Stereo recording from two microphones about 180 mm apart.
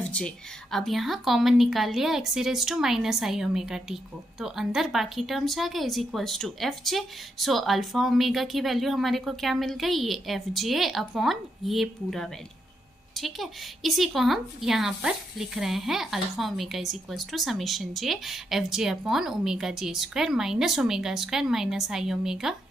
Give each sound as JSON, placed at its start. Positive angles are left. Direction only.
{"t": 0.0, "sound": "a woman's voice", "side_deg": 5}